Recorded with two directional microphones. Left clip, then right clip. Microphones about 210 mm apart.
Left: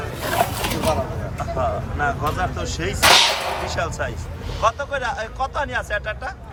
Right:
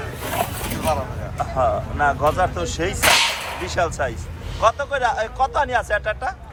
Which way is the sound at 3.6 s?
5° left (ahead or behind).